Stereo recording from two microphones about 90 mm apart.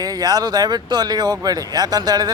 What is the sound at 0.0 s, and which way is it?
Speech, 45° right (ahead or behind).